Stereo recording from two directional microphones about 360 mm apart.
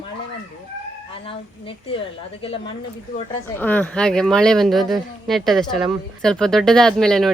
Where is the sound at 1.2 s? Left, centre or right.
Centre.